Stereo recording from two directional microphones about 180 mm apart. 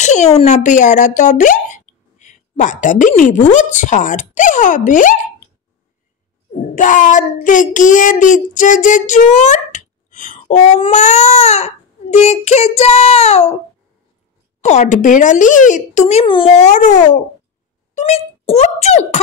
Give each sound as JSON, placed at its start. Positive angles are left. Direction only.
{"t": 0.0, "sound": "a sound", "side_deg": 40}
{"t": 0.4, "sound": "speech", "side_deg": 40}
{"t": 6.5, "sound": "child singing", "side_deg": 45}
{"t": 10.8, "sound": "speech", "side_deg": 40}
{"t": 14.6, "sound": "speech", "side_deg": 40}
{"t": 16.5, "sound": "a child's voice", "side_deg": 40}